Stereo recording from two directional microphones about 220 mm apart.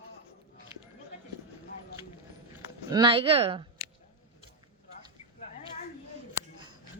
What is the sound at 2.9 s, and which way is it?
Speech, 20° right (ahead or behind).